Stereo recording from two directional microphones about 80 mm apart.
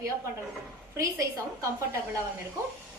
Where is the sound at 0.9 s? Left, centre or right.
Right.